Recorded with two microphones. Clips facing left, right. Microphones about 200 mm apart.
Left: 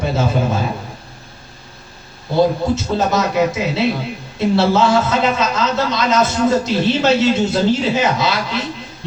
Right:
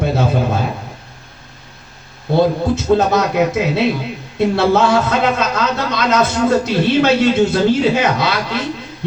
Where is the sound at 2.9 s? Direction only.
55° right (ahead or behind).